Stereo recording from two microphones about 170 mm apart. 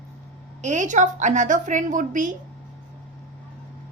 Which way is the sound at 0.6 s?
45° right (ahead or behind).